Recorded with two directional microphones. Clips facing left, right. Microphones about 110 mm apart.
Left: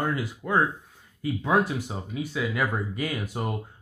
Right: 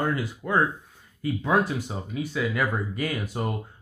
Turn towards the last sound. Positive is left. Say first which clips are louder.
# right 1 dB
turn(degrees=15)  # may be behind; listen again after turning